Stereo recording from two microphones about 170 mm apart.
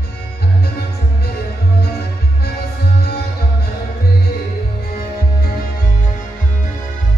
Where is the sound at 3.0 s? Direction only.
70° left (ahead or behind).